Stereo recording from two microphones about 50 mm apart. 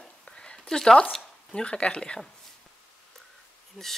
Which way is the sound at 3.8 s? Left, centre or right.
Centre.